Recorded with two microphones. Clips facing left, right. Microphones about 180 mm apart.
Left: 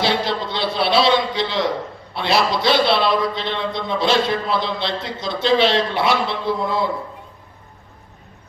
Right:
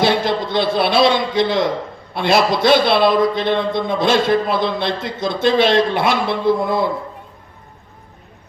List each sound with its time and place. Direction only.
0.0 s a man's voice: 50° right (ahead or behind)